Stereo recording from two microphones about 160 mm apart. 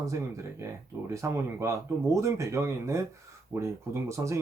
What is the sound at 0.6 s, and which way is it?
Speech, 20° right (ahead or behind).